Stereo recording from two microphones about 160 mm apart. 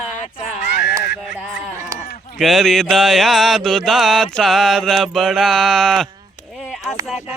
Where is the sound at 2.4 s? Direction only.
Centre (ahead or behind).